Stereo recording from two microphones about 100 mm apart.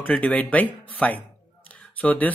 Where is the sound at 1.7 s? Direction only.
15° left (ahead or behind).